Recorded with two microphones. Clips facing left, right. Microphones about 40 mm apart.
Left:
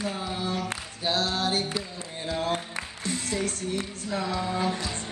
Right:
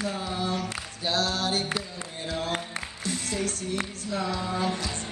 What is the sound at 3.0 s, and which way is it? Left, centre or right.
Music, left.